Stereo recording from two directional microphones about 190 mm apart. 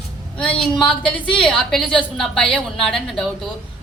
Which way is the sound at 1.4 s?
5° left (ahead or behind).